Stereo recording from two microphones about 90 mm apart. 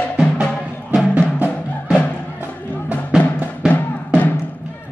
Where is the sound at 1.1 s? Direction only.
20° right (ahead or behind).